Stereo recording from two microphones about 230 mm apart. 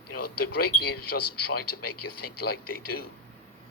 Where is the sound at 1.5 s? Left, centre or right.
Left.